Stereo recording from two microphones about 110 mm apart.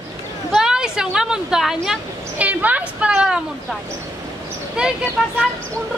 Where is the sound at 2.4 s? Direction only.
15° right (ahead or behind).